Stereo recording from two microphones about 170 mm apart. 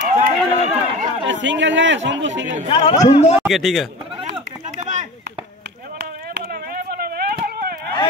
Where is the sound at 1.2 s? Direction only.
90° right.